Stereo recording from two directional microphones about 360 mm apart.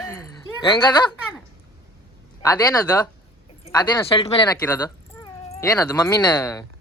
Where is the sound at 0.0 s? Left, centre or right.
Centre.